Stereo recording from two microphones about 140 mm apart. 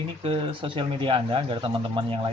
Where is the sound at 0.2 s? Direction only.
40° right (ahead or behind).